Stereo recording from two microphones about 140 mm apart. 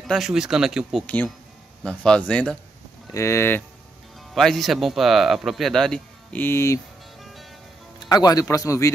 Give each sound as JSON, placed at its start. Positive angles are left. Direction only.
{"t": 0.1, "sound": "speech", "side_deg": -5}
{"t": 1.0, "sound": "speech", "side_deg": 10}
{"t": 3.1, "sound": "speech", "side_deg": 20}
{"t": 4.3, "sound": "speech", "side_deg": 0}
{"t": 8.0, "sound": "speech", "side_deg": 30}